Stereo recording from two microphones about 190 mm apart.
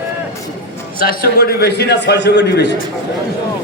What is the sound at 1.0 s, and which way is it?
A man's voice, 50° left (ahead or behind).